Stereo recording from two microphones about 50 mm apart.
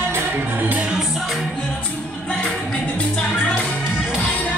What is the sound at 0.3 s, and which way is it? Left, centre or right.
Music, right.